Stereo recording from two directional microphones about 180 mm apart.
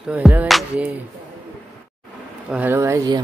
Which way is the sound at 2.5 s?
10° right (ahead or behind).